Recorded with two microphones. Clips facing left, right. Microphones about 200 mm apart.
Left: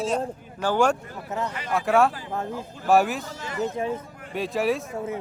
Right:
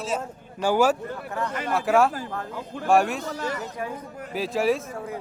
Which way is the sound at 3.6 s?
25° left (ahead or behind).